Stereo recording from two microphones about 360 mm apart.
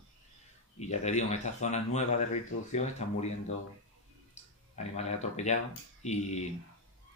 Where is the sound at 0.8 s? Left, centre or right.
Centre.